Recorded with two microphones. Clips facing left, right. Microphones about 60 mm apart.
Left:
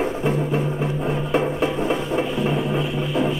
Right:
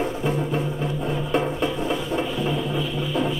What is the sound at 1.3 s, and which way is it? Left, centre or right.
Music, centre.